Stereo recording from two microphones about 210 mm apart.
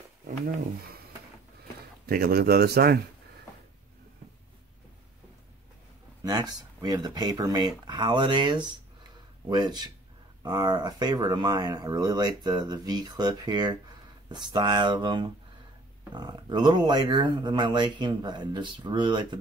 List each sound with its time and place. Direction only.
2.0 s speech: 45° right (ahead or behind)
6.2 s speech: 20° right (ahead or behind)